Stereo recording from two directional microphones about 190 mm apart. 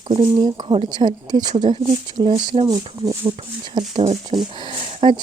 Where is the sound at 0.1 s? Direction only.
25° right (ahead or behind).